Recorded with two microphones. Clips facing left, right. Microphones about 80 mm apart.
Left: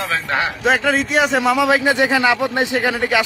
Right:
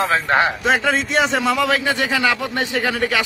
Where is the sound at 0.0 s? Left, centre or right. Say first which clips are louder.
Right 4 dB; right.